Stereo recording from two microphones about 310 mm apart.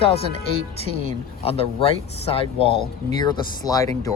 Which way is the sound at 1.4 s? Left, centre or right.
Centre.